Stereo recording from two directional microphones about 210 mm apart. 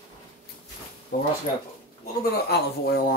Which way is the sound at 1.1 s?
45° left (ahead or behind).